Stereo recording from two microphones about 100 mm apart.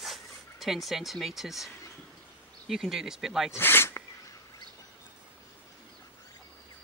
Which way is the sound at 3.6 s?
20° left (ahead or behind).